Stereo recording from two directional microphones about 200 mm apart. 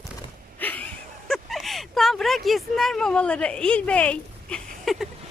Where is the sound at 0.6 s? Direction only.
10° left (ahead or behind).